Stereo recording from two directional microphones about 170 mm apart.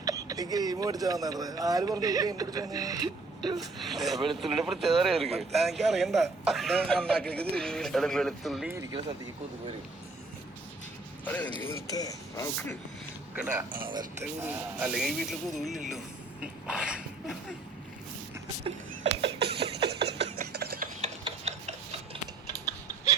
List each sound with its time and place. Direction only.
0.0 s speech: 20° right (ahead or behind)
3.8 s speech: centre (ahead or behind)
11.3 s speech: 10° left (ahead or behind)
11.6 s speech: 20° left (ahead or behind)
13.3 s speech: 10° right (ahead or behind)
16.4 s a sound: 5° right (ahead or behind)
19.2 s a sound: 75° right (ahead or behind)
20.6 s ratchet: 60° right (ahead or behind)
21.0 s mechanisms: 40° right (ahead or behind)